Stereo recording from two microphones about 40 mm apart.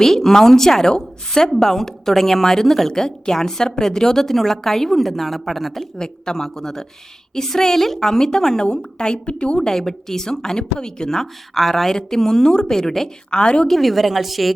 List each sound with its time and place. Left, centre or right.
0.0 s a woman's voice: centre
6.0 s a woman's voice: centre
9.6 s a woman's voice: centre
13.3 s a woman's voice: left
13.7 s a woman's voice: centre